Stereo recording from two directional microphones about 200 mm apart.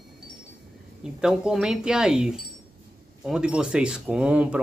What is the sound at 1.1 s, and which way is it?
Speech, 5° right (ahead or behind).